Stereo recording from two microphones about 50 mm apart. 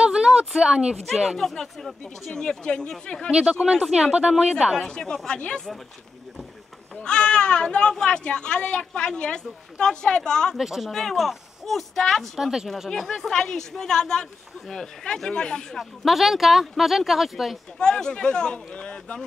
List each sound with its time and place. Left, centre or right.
0.0 s a sound: centre
0.5 s speech: centre
1.0 s speech: centre
2.3 s speech: centre
3.3 s speech: centre
4.7 s speech: centre
7.0 s speech: centre
10.6 s speech: centre
10.9 s speech: centre
12.4 s speech: centre
12.9 s speech: centre
16.0 s speech: centre
17.7 s speech: centre